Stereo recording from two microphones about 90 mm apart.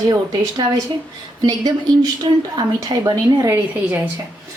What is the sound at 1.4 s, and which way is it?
Speech, 50° right (ahead or behind).